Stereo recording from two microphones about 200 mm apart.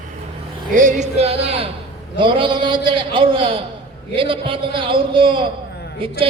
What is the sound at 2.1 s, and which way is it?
A man's voice, 25° right (ahead or behind).